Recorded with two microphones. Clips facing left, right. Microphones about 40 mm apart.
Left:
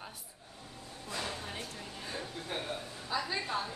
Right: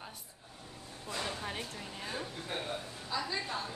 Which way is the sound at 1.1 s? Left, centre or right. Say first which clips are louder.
Even; centre.